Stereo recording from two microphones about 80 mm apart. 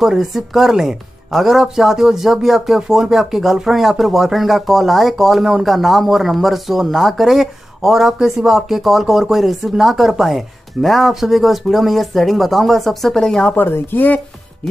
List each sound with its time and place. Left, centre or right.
0.0 s speech: centre
13.5 s speech: left